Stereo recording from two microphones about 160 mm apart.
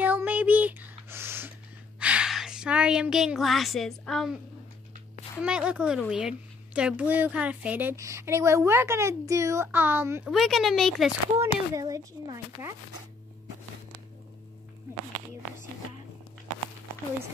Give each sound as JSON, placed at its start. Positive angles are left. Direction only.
{"t": 0.0, "sound": "a sound", "side_deg": -10}
{"t": 2.0, "sound": "speech", "side_deg": -5}
{"t": 5.4, "sound": "a woman's voice", "side_deg": -5}
{"t": 10.2, "sound": "speech", "side_deg": 0}
{"t": 11.3, "sound": "speech", "side_deg": -20}